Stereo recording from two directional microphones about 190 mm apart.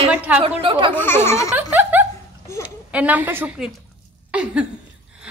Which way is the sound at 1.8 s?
10° right (ahead or behind).